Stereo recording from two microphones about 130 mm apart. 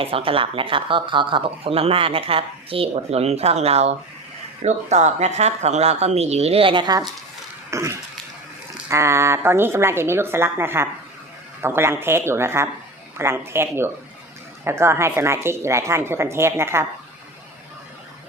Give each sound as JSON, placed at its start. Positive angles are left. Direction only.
{"t": 0.0, "sound": "speech", "side_deg": -45}
{"t": 7.7, "sound": "throat clearing", "side_deg": -20}
{"t": 8.9, "sound": "speech", "side_deg": -20}